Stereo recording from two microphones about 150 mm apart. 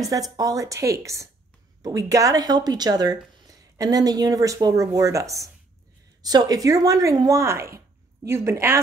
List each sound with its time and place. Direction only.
0.0 s a woman's voice: 25° right (ahead or behind)